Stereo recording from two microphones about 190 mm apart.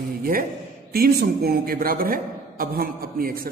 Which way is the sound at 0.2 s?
50° right (ahead or behind).